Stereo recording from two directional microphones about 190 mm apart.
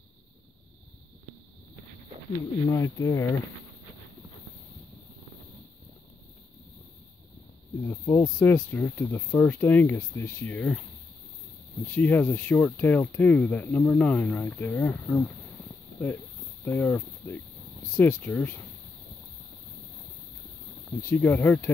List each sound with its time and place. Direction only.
2.7 s speech: 15° left (ahead or behind)
7.8 s cricket: 15° left (ahead or behind)
8.4 s speech: 10° left (ahead or behind)
11.9 s speech: 10° left (ahead or behind)
16.6 s speech: 10° left (ahead or behind)
21.1 s speech: 10° left (ahead or behind)